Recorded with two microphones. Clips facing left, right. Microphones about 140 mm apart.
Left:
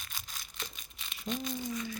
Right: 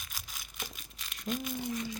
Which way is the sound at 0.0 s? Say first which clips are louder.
Even; 5° right (ahead or behind).